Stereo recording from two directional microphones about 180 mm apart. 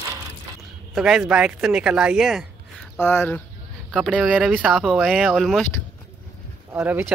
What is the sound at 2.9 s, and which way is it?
Speech, 15° left (ahead or behind).